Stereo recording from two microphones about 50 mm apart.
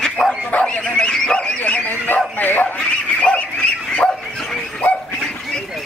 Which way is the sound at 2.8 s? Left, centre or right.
Left.